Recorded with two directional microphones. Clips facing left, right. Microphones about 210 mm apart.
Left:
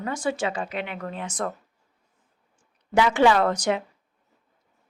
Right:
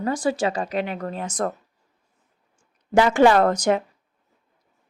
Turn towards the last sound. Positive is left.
turn(degrees=-45)  # may be behind; listen again after turning